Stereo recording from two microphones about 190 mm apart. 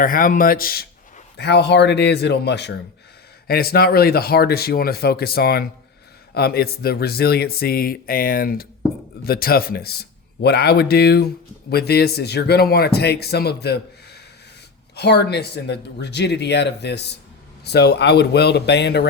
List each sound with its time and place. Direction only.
0.0 s speech: 45° left (ahead or behind)
1.4 s speech: 60° left (ahead or behind)